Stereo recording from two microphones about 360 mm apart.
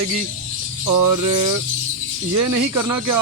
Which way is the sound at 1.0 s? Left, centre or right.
Right.